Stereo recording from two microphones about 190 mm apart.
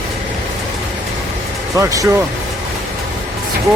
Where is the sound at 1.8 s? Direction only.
15° right (ahead or behind).